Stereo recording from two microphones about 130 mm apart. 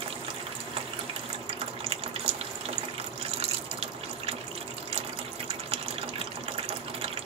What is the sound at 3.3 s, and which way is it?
Water, 50° right (ahead or behind).